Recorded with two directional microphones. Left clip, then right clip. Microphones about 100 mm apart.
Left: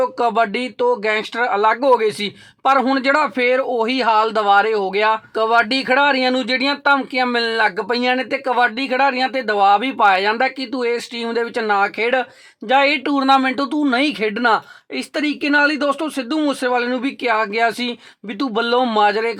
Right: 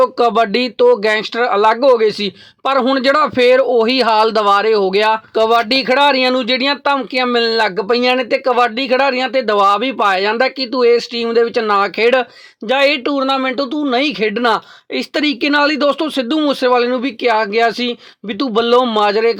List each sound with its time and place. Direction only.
0.0 s speech: 35° right (ahead or behind); by 2.3 s 20° right (ahead or behind)
2.6 s speech: 35° right (ahead or behind)
13.1 s speech: 10° right (ahead or behind)
13.9 s speech: 15° right (ahead or behind)